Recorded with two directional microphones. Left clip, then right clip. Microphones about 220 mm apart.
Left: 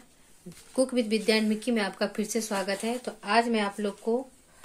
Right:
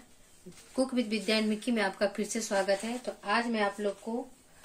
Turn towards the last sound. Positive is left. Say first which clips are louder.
# left 2 dB
turn(degrees=35)  # may be behind; listen again after turning